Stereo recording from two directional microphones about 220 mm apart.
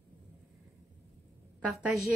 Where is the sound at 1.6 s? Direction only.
5° right (ahead or behind).